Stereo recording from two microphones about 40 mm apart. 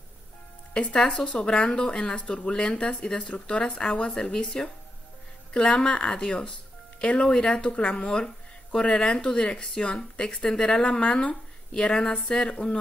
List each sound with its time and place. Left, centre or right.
0.7 s speech: left
7.2 s speech: centre